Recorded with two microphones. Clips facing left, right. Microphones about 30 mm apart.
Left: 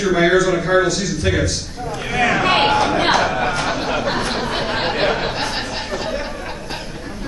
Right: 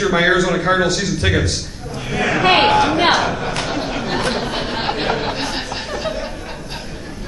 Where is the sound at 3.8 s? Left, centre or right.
Centre.